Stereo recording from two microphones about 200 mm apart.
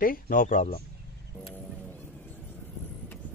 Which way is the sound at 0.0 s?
45° left (ahead or behind).